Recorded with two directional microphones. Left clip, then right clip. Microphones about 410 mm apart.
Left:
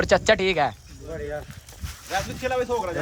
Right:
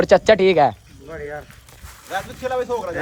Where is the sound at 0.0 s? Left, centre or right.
Centre.